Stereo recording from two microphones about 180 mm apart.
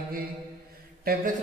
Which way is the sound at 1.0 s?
55° right (ahead or behind).